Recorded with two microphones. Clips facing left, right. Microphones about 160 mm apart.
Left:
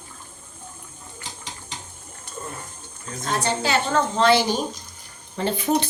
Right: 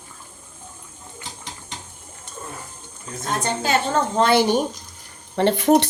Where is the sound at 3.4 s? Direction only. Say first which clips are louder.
Right 2 dB; 45° right (ahead or behind).